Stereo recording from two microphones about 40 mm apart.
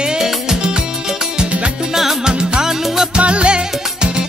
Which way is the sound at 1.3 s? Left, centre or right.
Right.